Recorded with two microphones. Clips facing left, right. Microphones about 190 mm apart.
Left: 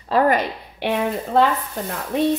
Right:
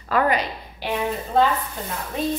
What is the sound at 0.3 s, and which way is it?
A woman's voice, 60° left (ahead or behind).